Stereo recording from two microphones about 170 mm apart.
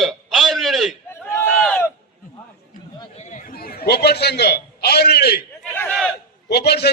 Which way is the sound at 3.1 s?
40° left (ahead or behind).